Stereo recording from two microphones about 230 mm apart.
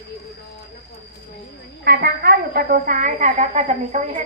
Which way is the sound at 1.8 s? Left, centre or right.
Right.